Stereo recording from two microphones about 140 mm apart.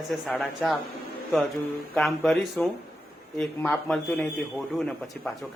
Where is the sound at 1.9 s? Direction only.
5° left (ahead or behind).